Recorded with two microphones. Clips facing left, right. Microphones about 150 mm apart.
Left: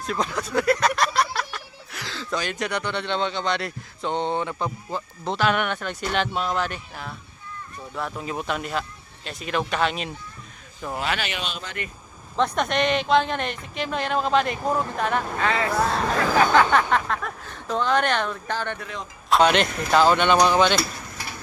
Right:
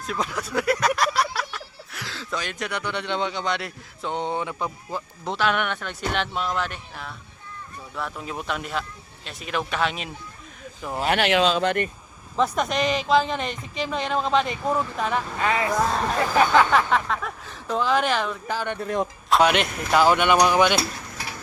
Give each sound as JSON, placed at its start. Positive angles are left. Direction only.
{"t": 0.1, "sound": "a sound", "side_deg": -5}
{"t": 1.5, "sound": "speech", "side_deg": -5}
{"t": 11.2, "sound": "speech", "side_deg": -90}
{"t": 12.4, "sound": "speech", "side_deg": 0}
{"t": 15.4, "sound": "speech", "side_deg": -15}
{"t": 16.6, "sound": "speech", "side_deg": 0}